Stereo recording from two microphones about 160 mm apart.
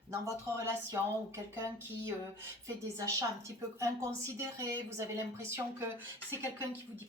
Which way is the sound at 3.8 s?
20° right (ahead or behind).